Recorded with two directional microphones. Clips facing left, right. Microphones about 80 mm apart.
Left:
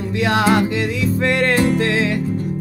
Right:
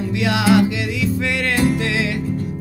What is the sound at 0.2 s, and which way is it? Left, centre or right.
Music, left.